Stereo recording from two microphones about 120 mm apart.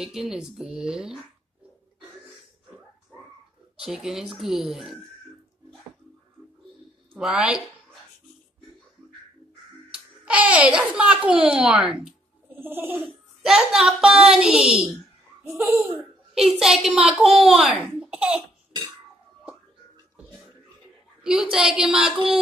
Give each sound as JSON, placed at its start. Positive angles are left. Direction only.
{"t": 0.0, "sound": "a child's voice", "side_deg": -5}
{"t": 3.7, "sound": "a child's voice", "side_deg": -5}
{"t": 7.2, "sound": "a woman's voice", "side_deg": -5}
{"t": 9.9, "sound": "a child's voice", "side_deg": -10}
{"t": 12.5, "sound": "speech", "side_deg": -15}
{"t": 13.4, "sound": "a child's voice", "side_deg": -5}
{"t": 15.4, "sound": "speech", "side_deg": -25}
{"t": 16.0, "sound": "a child's voice", "side_deg": 0}
{"t": 18.0, "sound": "cough", "side_deg": -10}
{"t": 21.2, "sound": "a woman's voice", "side_deg": -5}